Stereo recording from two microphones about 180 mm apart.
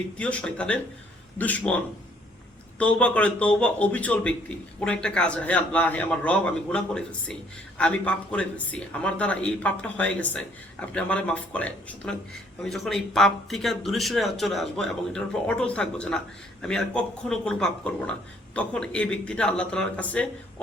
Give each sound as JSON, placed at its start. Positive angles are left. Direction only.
{"t": 0.2, "sound": "a man's voice", "side_deg": 5}